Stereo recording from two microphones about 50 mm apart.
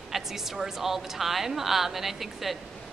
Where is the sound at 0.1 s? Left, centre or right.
Centre.